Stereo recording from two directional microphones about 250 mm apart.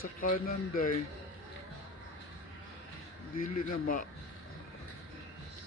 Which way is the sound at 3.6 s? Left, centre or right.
Left.